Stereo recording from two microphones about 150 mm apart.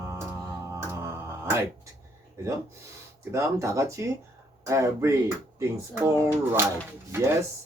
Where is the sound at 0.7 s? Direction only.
20° right (ahead or behind).